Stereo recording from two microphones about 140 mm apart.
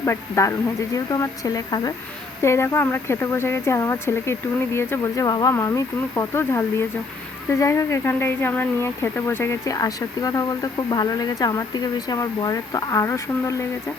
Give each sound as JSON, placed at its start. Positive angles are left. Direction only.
{"t": 0.0, "sound": "speech", "side_deg": 20}